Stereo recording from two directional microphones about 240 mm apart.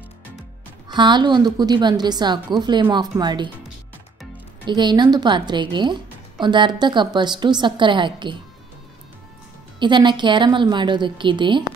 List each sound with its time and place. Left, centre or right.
0.8 s a woman's voice: centre
4.6 s a woman's voice: centre
9.8 s a woman's voice: centre